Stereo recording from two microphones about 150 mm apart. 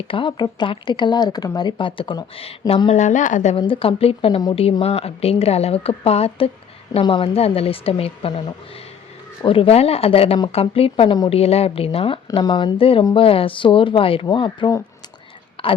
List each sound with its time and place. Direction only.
0.1 s speech: 35° left (ahead or behind)
2.9 s a woman's voice: 55° left (ahead or behind)
3.5 s speech: 35° left (ahead or behind)
4.6 s speech: 40° left (ahead or behind)
15.6 s a sound: 35° left (ahead or behind)